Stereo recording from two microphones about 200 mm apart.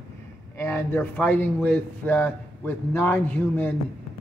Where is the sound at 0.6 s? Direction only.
10° left (ahead or behind).